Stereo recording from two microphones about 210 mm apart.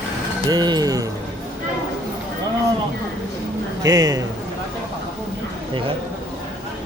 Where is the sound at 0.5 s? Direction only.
20° right (ahead or behind).